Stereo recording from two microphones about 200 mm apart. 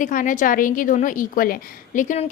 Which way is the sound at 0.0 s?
40° left (ahead or behind).